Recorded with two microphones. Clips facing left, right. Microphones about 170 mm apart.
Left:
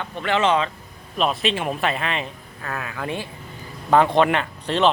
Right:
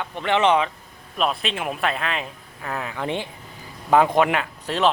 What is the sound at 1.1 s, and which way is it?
Speech, centre (ahead or behind).